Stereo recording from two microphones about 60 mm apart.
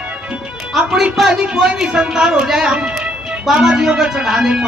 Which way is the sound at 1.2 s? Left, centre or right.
Centre.